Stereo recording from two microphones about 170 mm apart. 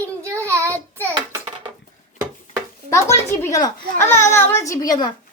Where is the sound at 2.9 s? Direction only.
15° left (ahead or behind).